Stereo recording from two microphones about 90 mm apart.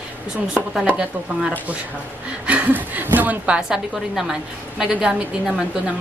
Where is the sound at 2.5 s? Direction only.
15° right (ahead or behind).